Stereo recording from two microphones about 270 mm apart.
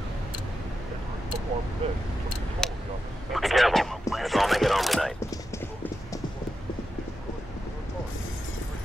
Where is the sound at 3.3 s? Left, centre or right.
Centre.